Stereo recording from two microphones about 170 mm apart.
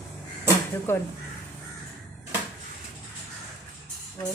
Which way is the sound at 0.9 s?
15° left (ahead or behind).